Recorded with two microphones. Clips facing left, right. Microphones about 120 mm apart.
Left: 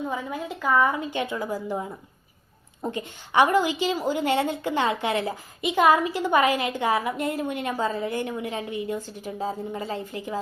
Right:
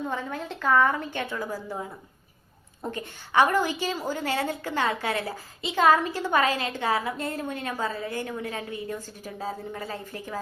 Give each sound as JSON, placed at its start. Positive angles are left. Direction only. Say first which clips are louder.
{"t": 0.1, "sound": "a woman's voice", "louder": "left 2 dB", "side_deg": 10}